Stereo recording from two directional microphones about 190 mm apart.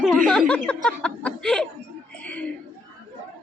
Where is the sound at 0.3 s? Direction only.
5° left (ahead or behind).